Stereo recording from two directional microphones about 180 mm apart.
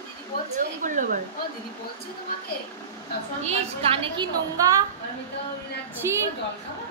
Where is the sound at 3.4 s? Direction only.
35° right (ahead or behind).